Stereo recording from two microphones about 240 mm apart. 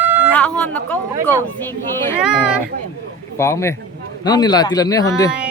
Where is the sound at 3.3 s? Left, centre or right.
Centre.